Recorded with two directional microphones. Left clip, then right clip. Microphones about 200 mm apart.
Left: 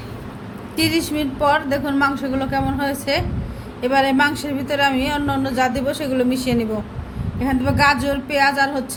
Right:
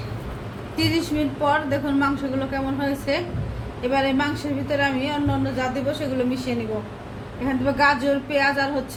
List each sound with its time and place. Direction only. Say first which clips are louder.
0.8 s speech: left 3 dB; 45° left (ahead or behind)